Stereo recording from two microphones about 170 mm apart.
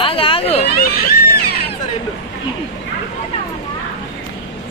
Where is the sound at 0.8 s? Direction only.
65° left (ahead or behind).